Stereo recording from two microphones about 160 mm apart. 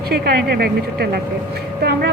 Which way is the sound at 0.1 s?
75° right (ahead or behind).